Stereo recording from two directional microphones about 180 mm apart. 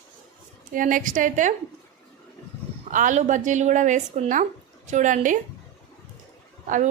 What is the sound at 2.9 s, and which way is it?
A woman's voice, 45° right (ahead or behind).